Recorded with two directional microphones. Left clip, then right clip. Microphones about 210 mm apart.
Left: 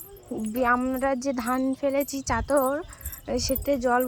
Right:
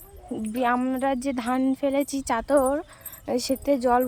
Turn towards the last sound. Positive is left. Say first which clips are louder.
# right 2 dB
turn(degrees=-20)  # may be behind; listen again after turning